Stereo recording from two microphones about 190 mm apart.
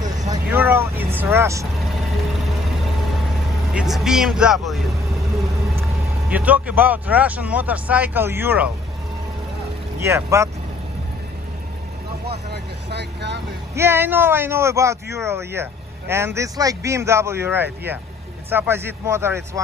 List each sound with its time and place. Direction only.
0.5 s speech: 10° right (ahead or behind)
1.8 s vehicle: centre (ahead or behind)
3.7 s speech: centre (ahead or behind)
6.2 s speech: 10° right (ahead or behind)
10.0 s speech: 15° right (ahead or behind)
12.3 s speech: 60° right (ahead or behind)
13.7 s speech: 10° right (ahead or behind)